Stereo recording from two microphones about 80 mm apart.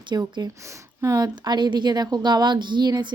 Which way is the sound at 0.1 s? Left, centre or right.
Right.